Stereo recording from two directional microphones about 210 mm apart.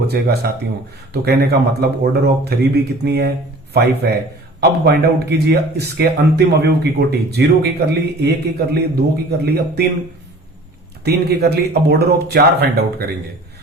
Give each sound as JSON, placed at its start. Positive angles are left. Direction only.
{"t": 0.1, "sound": "speech", "side_deg": -50}
{"t": 11.0, "sound": "speech", "side_deg": -50}